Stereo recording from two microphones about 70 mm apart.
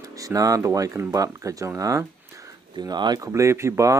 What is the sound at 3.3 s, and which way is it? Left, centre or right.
Speech, right.